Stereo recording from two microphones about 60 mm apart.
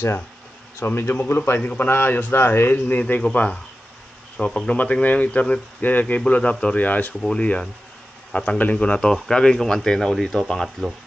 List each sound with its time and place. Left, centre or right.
0.7 s a man's voice: left
1.6 s a man's voice: left
1.9 s a man's voice: left
3.2 s a man's voice: centre
7.2 s a man's voice: centre